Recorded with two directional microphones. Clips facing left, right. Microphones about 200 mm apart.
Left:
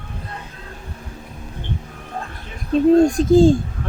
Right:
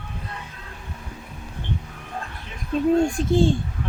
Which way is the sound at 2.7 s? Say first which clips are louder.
Left 6 dB; 35° left (ahead or behind).